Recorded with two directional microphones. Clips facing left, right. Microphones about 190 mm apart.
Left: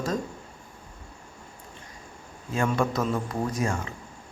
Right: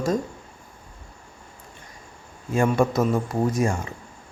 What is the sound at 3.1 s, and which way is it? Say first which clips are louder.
Speech: right 5 dB; 25° right (ahead or behind).